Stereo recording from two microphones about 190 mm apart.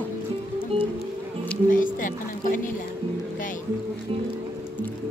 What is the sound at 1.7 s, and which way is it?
Speech, 45° left (ahead or behind).